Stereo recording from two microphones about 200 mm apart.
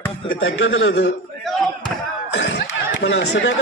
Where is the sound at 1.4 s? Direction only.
Centre (ahead or behind).